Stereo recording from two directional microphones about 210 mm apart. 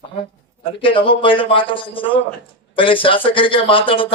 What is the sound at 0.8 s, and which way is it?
Speech, 25° left (ahead or behind).